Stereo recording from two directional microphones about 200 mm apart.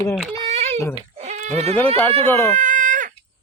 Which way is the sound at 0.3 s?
30° right (ahead or behind).